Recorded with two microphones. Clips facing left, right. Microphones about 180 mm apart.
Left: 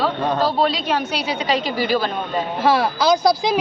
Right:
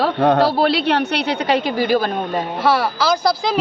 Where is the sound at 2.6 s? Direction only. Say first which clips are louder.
Left 1 dB; 15° left (ahead or behind).